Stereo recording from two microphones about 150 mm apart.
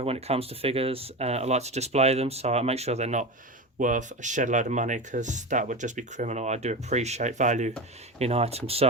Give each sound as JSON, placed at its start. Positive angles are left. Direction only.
{"t": 0.0, "sound": "speech", "side_deg": -40}